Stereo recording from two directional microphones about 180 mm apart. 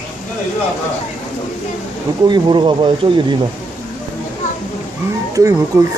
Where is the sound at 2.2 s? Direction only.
25° right (ahead or behind).